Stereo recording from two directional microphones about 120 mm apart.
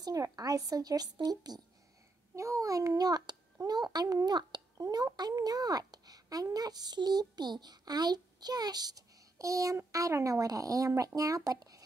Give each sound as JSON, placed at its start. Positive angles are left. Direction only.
{"t": 0.0, "sound": "a child's voice", "side_deg": -30}